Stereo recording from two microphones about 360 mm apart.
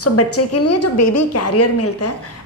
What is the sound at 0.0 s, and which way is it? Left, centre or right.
A woman's voice, left.